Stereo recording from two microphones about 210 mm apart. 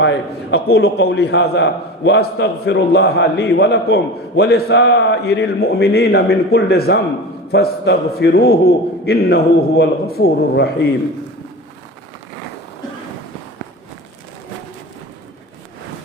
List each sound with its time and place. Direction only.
0.0 s a man's voice: 60° left (ahead or behind)